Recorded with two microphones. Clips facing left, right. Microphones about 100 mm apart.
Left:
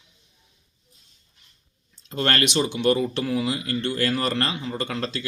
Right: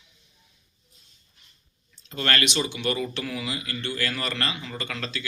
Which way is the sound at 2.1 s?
40° left (ahead or behind).